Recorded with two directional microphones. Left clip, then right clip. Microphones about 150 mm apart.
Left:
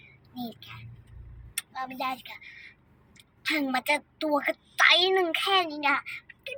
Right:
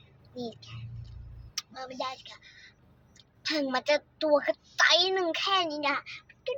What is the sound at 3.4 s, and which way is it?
A woman's voice, 15° right (ahead or behind).